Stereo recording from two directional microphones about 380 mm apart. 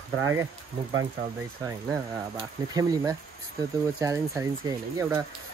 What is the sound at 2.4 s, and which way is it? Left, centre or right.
Speech, centre.